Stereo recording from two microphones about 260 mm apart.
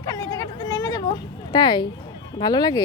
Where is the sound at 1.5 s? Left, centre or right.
Centre.